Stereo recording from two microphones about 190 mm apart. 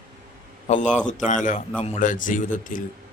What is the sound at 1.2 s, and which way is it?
Speech, 40° left (ahead or behind).